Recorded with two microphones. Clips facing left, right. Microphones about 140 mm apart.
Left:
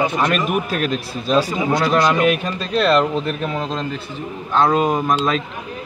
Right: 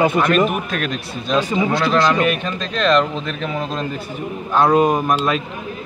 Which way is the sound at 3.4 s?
5° right (ahead or behind).